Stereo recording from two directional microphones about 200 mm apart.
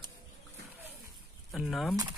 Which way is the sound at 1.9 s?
20° right (ahead or behind).